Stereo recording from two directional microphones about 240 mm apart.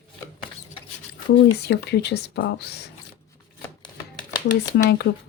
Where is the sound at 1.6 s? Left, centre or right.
Left.